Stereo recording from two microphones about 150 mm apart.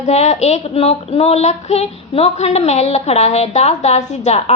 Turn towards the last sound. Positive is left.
turn(degrees=45)  # may be behind; listen again after turning